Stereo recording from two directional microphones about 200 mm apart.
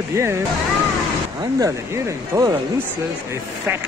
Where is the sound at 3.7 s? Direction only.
10° right (ahead or behind).